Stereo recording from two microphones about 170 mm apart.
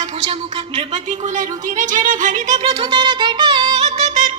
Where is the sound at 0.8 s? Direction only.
45° right (ahead or behind).